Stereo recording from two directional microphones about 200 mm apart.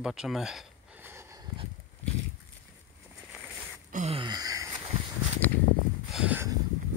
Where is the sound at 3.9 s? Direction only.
40° right (ahead or behind).